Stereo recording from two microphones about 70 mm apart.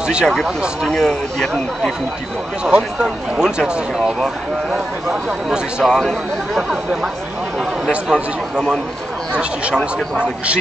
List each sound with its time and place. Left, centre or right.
0.0 s speech: centre
0.8 s speech: centre
2.6 s speech: centre
4.2 s speech: centre
5.1 s speech: centre